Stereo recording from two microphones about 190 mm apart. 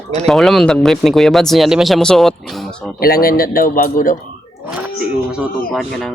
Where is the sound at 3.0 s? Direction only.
50° left (ahead or behind).